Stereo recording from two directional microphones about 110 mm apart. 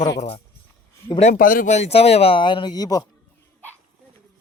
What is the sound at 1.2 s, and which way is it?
Speech, 90° left.